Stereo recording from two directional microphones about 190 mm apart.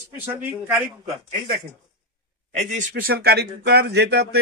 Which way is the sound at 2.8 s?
50° right (ahead or behind).